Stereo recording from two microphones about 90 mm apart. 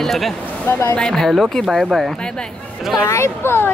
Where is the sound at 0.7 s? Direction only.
30° left (ahead or behind).